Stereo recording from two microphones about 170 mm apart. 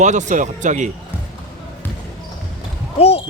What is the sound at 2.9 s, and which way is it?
Speech, 35° left (ahead or behind).